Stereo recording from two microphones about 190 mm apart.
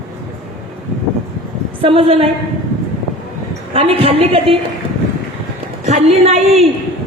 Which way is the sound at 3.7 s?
30° right (ahead or behind).